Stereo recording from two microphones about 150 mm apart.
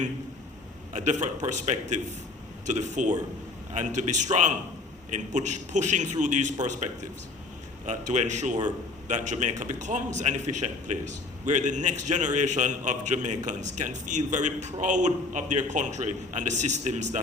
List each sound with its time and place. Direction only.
0.9 s a man's voice: 55° right (ahead or behind)